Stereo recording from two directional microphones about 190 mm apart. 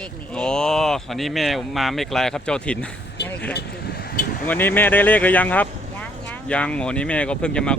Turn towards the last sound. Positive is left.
turn(degrees=5)  # may be behind; listen again after turning